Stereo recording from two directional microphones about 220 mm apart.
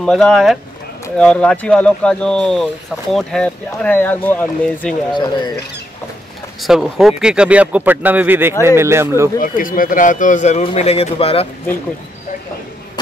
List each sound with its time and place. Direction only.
0.0 s speech: centre (ahead or behind)
5.1 s speech: 20° left (ahead or behind)
6.6 s speech: centre (ahead or behind)
9.4 s speech: 40° left (ahead or behind)